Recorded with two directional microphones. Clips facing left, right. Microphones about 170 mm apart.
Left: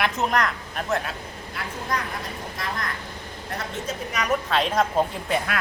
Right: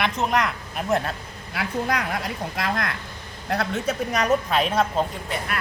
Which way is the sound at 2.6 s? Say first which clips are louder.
Right 4 dB; 70° right (ahead or behind).